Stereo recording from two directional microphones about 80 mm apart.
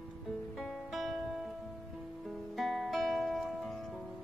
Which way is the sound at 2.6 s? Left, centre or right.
Centre.